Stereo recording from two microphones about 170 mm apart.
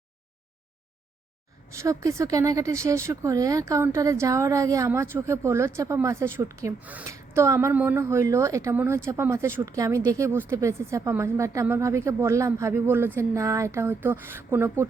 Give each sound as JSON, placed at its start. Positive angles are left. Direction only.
{"t": 1.7, "sound": "a woman's voice", "side_deg": -20}